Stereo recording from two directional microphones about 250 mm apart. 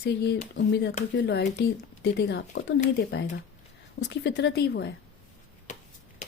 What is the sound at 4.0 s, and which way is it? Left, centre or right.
Speech, left.